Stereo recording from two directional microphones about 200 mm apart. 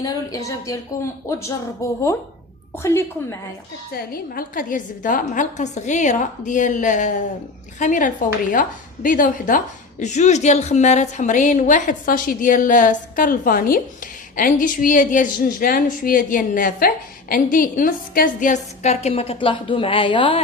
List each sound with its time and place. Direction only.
0.0 s speech: 15° left (ahead or behind)
3.9 s a woman's voice: 50° left (ahead or behind); by 20.4 s 25° left (ahead or behind)